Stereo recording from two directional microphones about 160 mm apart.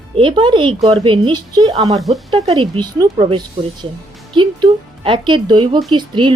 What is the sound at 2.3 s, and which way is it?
A woman's voice, 35° right (ahead or behind).